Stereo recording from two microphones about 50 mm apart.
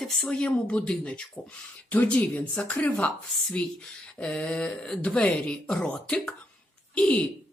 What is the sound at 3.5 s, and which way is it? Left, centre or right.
Speech, centre.